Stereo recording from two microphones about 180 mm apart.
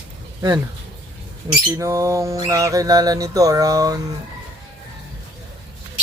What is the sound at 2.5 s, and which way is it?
Speech, 20° right (ahead or behind).